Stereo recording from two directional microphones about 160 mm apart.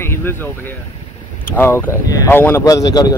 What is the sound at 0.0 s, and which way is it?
Speech, 15° left (ahead or behind).